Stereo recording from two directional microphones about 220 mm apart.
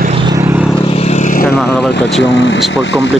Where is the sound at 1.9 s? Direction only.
50° left (ahead or behind).